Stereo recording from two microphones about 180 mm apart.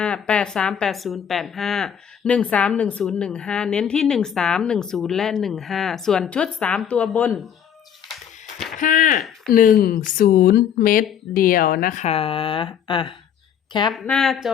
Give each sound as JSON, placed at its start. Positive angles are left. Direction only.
{"t": 0.0, "sound": "speech", "side_deg": 5}
{"t": 8.5, "sound": "a sound", "side_deg": 0}
{"t": 8.8, "sound": "speech", "side_deg": 45}
{"t": 13.9, "sound": "speech", "side_deg": 0}